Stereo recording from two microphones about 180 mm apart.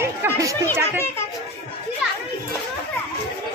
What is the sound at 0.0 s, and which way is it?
Chatter, 15° right (ahead or behind).